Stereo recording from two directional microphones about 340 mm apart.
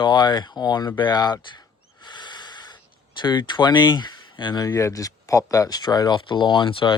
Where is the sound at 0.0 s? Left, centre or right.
Centre.